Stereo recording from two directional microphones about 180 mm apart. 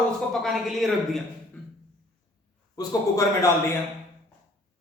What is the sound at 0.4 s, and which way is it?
Speech, centre (ahead or behind).